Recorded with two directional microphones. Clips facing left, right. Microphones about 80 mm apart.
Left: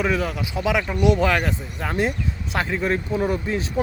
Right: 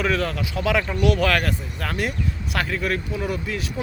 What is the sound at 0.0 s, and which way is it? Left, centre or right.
Speech, centre.